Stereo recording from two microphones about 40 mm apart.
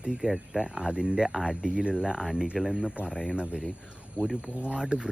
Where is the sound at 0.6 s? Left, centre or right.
Right.